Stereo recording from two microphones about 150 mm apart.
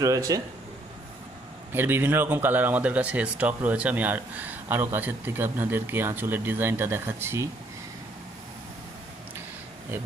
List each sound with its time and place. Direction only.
0.0 s speech: 20° right (ahead or behind)
1.7 s speech: 15° right (ahead or behind)